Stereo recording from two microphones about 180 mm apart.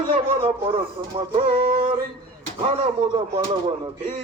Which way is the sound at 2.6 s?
30° right (ahead or behind).